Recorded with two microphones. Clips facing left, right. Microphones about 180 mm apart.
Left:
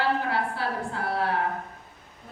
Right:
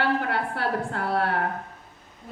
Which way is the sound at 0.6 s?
60° right (ahead or behind).